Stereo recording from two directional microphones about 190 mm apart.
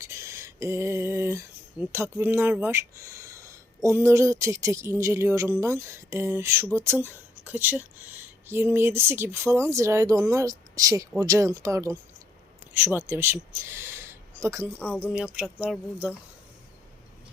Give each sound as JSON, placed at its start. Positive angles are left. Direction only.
{"t": 0.0, "sound": "speech", "side_deg": -15}